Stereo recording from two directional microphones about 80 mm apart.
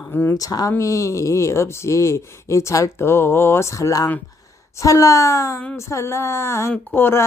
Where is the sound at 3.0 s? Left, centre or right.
Left.